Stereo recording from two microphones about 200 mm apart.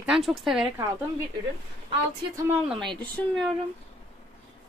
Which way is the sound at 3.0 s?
5° left (ahead or behind).